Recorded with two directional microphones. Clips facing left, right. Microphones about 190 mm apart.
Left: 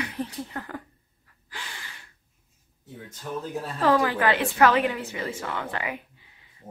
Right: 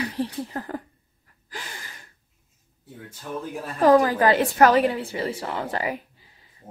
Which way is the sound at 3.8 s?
40° right (ahead or behind).